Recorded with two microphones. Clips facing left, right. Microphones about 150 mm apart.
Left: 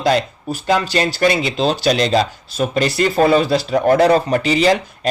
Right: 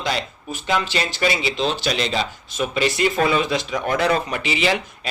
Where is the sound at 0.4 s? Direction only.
40° left (ahead or behind).